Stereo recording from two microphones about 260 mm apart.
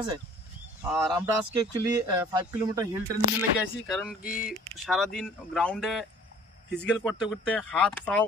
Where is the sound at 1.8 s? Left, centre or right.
Centre.